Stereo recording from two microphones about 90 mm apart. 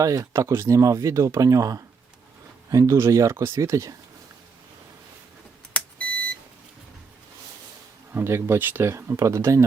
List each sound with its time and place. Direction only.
0.0 s speech: 35° right (ahead or behind)
5.7 s beep: 15° left (ahead or behind)
8.1 s speech: 25° right (ahead or behind)